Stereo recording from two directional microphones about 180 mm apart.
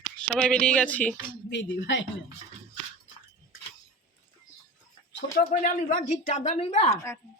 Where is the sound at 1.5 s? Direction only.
85° left.